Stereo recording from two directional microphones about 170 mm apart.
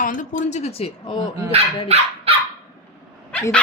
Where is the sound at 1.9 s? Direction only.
40° right (ahead or behind).